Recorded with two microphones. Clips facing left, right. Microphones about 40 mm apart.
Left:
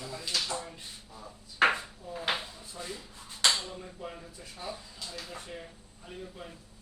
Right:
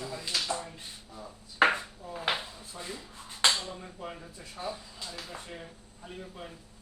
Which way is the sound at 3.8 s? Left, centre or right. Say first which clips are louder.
Even; centre.